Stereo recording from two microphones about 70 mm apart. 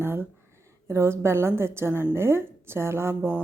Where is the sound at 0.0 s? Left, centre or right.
Right.